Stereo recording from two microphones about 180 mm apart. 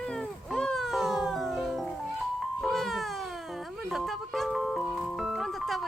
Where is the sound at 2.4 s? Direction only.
Centre (ahead or behind).